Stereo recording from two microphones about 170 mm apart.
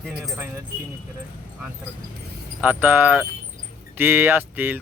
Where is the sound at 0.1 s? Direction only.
10° right (ahead or behind).